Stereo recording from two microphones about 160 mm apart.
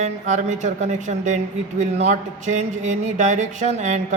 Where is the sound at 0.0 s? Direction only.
50° right (ahead or behind).